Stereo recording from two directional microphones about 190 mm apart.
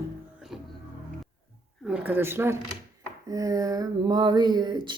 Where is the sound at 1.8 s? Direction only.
10° right (ahead or behind).